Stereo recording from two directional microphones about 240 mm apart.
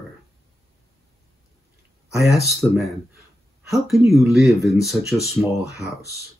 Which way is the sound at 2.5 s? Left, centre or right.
Centre.